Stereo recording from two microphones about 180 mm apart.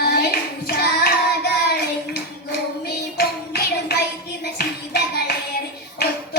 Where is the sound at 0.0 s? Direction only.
60° left (ahead or behind).